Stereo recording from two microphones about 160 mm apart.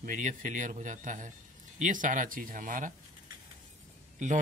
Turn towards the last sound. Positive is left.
turn(degrees=-50)  # may be behind; listen again after turning